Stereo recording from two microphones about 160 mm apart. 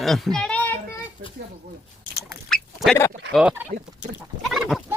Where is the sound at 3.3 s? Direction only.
Centre (ahead or behind).